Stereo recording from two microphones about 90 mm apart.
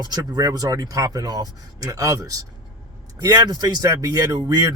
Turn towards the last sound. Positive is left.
turn(degrees=-40)  # may be behind; listen again after turning